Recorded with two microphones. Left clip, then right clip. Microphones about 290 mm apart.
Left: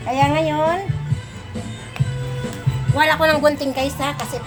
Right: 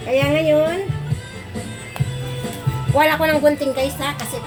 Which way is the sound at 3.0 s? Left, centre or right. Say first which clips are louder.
Even; left.